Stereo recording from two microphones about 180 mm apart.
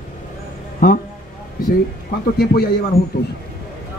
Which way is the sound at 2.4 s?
60° left (ahead or behind).